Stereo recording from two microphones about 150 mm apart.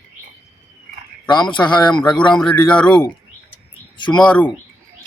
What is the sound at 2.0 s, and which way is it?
Speech, 5° left (ahead or behind).